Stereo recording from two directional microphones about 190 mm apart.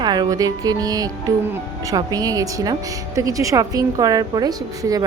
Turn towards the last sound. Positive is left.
turn(degrees=-20)  # may be behind; listen again after turning